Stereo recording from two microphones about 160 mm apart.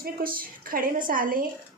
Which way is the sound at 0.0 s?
65° right (ahead or behind).